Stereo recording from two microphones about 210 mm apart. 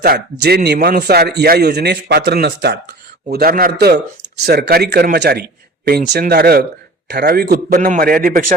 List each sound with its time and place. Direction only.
0.0 s a man's voice: 45° right (ahead or behind)